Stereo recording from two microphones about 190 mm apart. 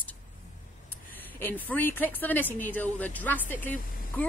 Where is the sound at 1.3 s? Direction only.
10° left (ahead or behind).